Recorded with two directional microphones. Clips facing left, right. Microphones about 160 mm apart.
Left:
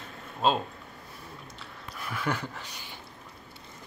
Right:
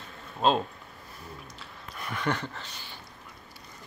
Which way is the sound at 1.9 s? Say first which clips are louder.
Right 1 dB; centre (ahead or behind).